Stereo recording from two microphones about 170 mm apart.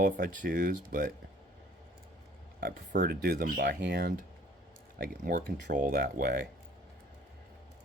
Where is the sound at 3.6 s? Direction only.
80° right.